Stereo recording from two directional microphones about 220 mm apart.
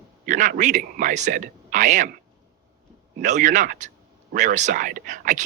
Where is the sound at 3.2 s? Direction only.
35° right (ahead or behind).